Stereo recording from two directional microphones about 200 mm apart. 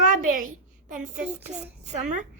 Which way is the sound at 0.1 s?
40° right (ahead or behind).